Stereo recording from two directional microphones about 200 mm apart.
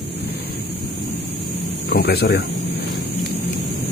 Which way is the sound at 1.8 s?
50° left (ahead or behind).